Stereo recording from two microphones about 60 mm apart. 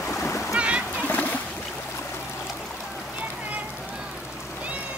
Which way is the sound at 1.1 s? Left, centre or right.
Left.